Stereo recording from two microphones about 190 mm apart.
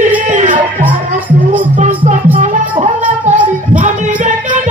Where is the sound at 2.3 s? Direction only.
40° right (ahead or behind).